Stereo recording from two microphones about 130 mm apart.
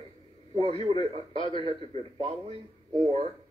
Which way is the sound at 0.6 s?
50° right (ahead or behind).